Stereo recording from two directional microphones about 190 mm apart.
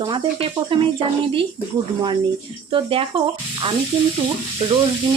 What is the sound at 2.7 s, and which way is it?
Speech, 25° right (ahead or behind).